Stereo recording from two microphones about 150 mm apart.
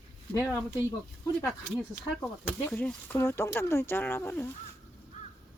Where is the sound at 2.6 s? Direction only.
10° left (ahead or behind).